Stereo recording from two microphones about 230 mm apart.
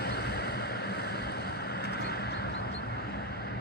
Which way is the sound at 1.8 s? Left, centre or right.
Left.